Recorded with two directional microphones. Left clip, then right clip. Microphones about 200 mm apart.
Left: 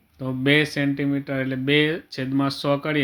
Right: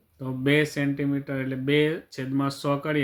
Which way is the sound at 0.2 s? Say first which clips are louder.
Left 3 dB; 20° left (ahead or behind).